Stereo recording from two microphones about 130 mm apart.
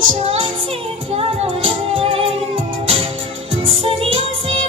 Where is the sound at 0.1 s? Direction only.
45° right (ahead or behind).